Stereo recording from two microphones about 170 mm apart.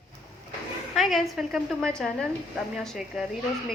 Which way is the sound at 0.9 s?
Centre (ahead or behind).